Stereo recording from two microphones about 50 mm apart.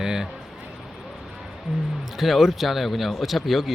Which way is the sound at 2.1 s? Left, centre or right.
Centre.